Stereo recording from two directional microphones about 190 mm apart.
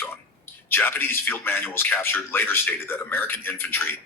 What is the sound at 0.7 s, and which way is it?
Speech, 10° left (ahead or behind).